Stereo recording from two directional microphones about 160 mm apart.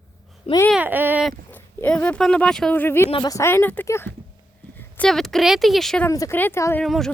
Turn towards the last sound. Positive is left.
turn(degrees=0)  # may be behind; listen again after turning